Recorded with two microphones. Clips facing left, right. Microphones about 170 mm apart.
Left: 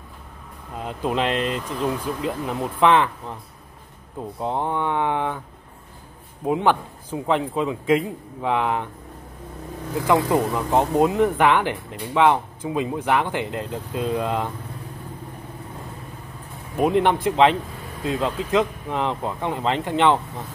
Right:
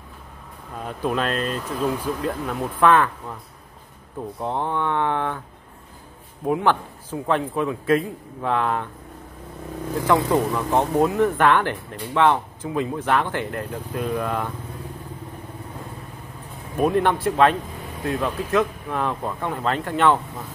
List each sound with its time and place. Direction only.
0.7 s speech: 20° left (ahead or behind)
1.7 s speech: 10° right (ahead or behind)
2.2 s speech: 15° left (ahead or behind)
4.4 s speech: 15° left (ahead or behind)
6.4 s speech: 15° left (ahead or behind)
9.9 s speech: 15° left (ahead or behind)
16.7 s speech: 20° left (ahead or behind)